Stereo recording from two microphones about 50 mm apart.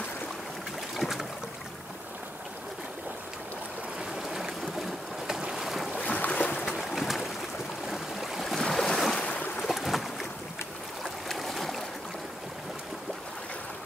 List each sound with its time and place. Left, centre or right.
0.9 s boat: centre
4.0 s boat: centre
5.9 s boat: left
6.7 s boat: centre
7.9 s waves: centre
9.8 s boat: centre
11.2 s boat: centre